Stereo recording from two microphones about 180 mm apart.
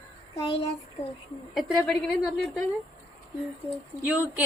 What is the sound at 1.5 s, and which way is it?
A woman's voice, centre (ahead or behind).